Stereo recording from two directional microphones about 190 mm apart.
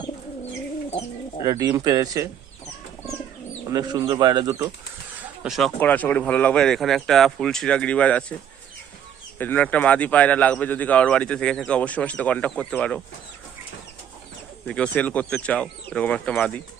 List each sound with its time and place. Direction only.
1.5 s speech: 20° right (ahead or behind)
3.7 s speech: 20° right (ahead or behind)
5.4 s speech: centre (ahead or behind)
9.4 s speech: 10° left (ahead or behind)
14.7 s speech: 5° left (ahead or behind)